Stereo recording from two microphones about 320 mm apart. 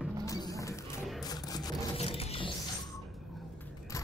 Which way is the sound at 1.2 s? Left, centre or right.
Centre.